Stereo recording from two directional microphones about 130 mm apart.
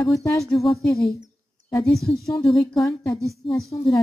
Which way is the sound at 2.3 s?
20° left (ahead or behind).